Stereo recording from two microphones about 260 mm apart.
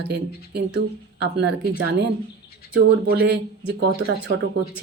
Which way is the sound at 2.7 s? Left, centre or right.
Right.